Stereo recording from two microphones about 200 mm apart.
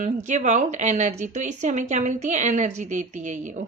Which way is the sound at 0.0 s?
35° right (ahead or behind).